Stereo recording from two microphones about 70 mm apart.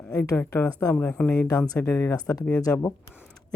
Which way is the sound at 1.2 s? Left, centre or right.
Centre.